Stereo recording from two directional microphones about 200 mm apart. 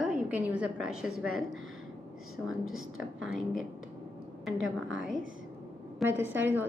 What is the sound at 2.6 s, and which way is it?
Speech, 90° right.